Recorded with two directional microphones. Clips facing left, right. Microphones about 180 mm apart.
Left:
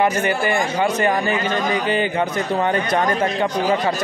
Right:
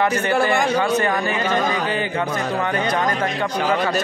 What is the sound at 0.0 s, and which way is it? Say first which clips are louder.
A man's voice: even; 15° left (ahead or behind).